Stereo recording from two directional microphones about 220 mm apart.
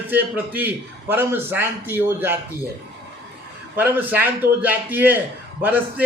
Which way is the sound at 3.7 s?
10° right (ahead or behind).